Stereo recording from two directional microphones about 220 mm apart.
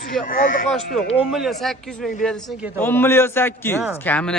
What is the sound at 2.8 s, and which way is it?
A man's voice, 10° left (ahead or behind).